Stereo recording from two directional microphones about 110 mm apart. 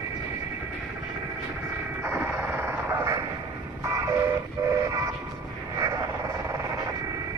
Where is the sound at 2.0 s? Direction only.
20° right (ahead or behind).